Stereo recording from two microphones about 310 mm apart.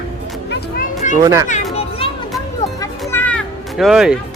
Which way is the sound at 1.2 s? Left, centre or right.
Centre.